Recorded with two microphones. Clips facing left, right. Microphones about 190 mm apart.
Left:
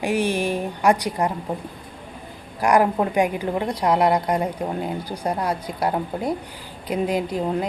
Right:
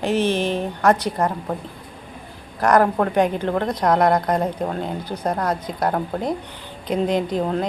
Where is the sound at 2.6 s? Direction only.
10° left (ahead or behind).